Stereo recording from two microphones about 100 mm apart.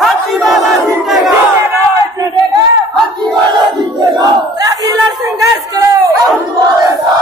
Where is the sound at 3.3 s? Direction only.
50° right (ahead or behind).